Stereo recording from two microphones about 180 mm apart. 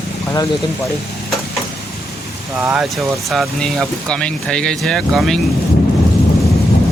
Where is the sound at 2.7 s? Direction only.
Centre (ahead or behind).